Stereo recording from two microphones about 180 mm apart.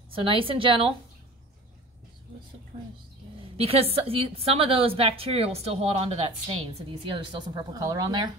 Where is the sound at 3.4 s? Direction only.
35° right (ahead or behind).